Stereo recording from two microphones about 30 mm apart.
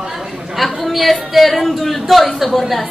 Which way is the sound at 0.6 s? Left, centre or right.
Centre.